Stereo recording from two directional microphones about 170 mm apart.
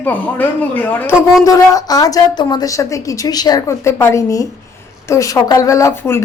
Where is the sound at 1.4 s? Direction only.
20° left (ahead or behind).